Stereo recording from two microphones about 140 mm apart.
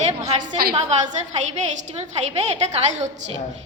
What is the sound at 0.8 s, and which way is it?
Speech, 55° right (ahead or behind).